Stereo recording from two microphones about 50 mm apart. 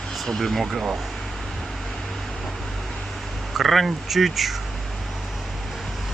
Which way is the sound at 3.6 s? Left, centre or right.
Centre.